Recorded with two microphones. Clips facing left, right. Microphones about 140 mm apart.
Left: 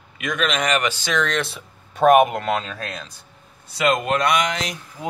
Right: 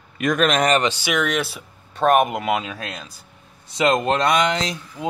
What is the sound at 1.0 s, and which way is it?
Speech, 10° right (ahead or behind).